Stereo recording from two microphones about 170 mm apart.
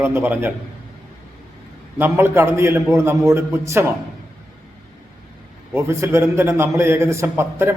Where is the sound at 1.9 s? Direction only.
15° right (ahead or behind).